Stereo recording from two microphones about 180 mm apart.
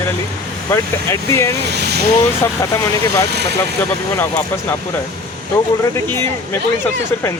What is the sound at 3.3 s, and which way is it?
Speech, 65° right (ahead or behind).